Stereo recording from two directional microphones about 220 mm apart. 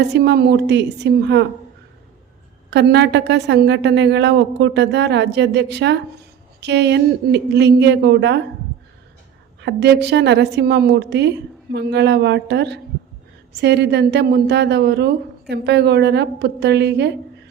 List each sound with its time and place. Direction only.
0.0 s a woman's voice: 50° right (ahead or behind)
2.6 s a woman's voice: 50° right (ahead or behind)
9.6 s a woman's voice: 50° right (ahead or behind)